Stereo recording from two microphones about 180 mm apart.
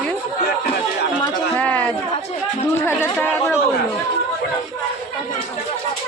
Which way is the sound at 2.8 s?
10° left (ahead or behind).